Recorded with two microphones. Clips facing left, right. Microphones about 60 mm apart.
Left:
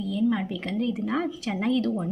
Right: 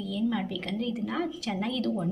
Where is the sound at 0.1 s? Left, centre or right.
Left.